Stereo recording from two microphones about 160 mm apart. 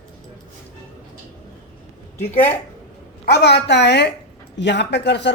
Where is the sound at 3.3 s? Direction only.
90° left.